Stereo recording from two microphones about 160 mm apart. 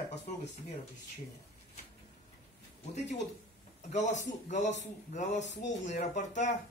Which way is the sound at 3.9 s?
50° left (ahead or behind).